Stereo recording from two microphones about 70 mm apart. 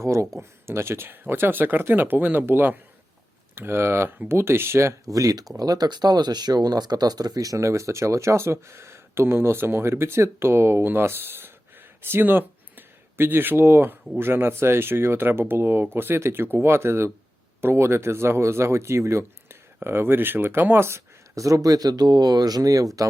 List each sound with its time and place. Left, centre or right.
0.0 s speech: right
5.0 s speech: right